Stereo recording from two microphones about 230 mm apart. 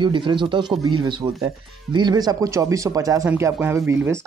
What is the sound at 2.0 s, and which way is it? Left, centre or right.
Speech, centre.